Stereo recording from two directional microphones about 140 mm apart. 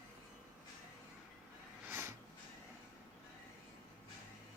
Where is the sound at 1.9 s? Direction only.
15° right (ahead or behind).